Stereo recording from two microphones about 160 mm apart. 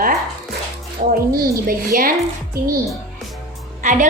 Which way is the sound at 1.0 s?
50° right (ahead or behind).